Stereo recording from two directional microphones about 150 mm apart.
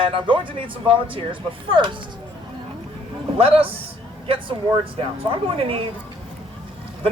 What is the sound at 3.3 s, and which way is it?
Speech, 40° right (ahead or behind).